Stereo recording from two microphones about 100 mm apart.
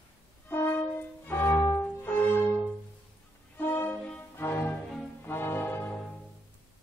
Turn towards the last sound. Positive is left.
turn(degrees=20)  # may be behind; listen again after turning